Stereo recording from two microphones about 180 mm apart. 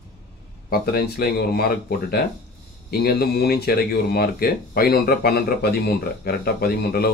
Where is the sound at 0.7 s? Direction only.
60° left (ahead or behind).